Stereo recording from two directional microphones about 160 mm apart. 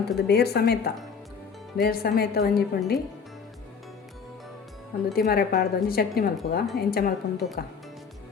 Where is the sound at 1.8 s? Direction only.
70° left (ahead or behind).